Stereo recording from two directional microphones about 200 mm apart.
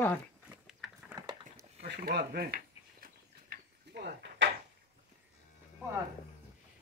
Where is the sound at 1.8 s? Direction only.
50° right (ahead or behind).